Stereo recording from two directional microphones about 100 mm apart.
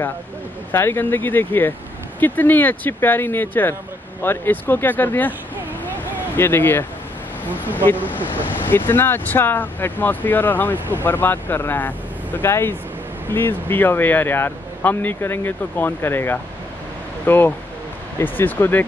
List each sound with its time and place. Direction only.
0.7 s speech: 20° left (ahead or behind)
6.3 s speech: 20° left (ahead or behind)